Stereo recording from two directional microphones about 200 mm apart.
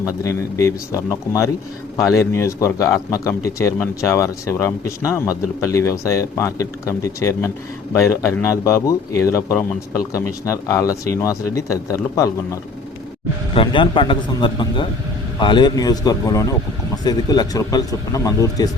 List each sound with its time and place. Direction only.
0.0 s speech: 15° left (ahead or behind)